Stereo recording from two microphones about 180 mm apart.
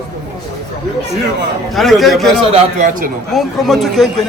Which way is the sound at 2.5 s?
45° right (ahead or behind).